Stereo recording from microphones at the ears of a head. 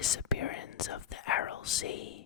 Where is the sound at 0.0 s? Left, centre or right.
Left.